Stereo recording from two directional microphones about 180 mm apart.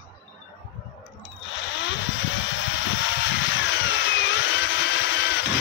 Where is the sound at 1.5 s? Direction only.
90° left.